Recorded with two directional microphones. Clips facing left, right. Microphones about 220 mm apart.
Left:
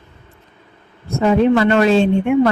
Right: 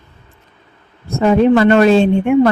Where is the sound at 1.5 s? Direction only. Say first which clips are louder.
Right 4 dB; 45° right (ahead or behind).